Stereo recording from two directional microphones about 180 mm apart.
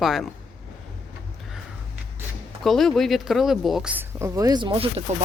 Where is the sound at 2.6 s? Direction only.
Centre (ahead or behind).